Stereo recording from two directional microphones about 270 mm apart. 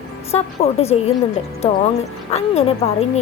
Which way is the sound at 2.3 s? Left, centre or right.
Left.